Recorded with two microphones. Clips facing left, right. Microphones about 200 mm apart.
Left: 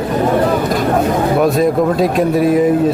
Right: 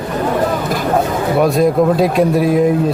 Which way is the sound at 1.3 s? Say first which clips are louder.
Right 3 dB; centre (ahead or behind).